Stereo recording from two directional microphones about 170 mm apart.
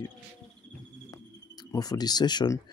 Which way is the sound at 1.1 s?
20° left (ahead or behind).